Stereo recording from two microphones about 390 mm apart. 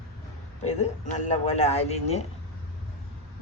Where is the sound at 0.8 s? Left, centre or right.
Centre.